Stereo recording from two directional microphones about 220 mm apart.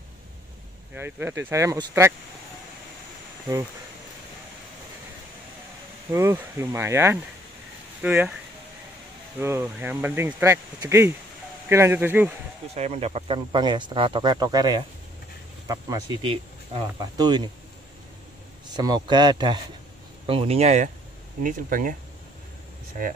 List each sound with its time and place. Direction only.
0.9 s speech: 10° right (ahead or behind)
6.1 s speech: 10° right (ahead or behind)
9.4 s speech: 10° right (ahead or behind)
12.7 s speech: 30° right (ahead or behind)
18.7 s speech: 20° right (ahead or behind); by 21.9 s 40° right (ahead or behind)